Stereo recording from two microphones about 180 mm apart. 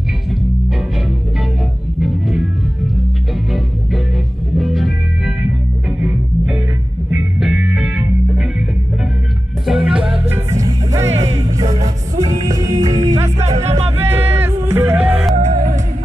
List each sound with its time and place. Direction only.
2.0 s music: centre (ahead or behind)
4.6 s music: centre (ahead or behind)
9.7 s music: 5° right (ahead or behind); by 12.8 s 20° right (ahead or behind)
12.8 s music: 40° right (ahead or behind)
14.2 s music: 10° right (ahead or behind)
15.3 s music: 45° right (ahead or behind)